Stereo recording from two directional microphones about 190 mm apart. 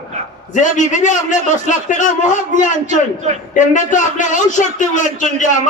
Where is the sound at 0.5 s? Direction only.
40° left (ahead or behind).